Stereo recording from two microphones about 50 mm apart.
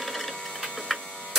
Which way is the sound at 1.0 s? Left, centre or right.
Left.